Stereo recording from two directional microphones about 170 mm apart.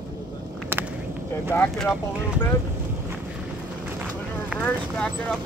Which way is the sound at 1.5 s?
10° left (ahead or behind).